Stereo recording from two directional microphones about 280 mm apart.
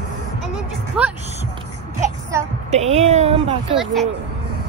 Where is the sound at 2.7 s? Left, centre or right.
Right.